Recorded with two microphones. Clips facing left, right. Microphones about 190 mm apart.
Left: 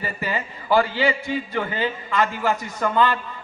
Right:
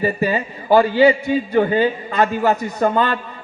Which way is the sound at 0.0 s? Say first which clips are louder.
Right 9 dB; 15° right (ahead or behind).